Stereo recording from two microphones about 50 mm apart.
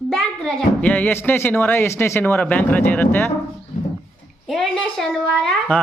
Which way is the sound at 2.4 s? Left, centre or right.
Left.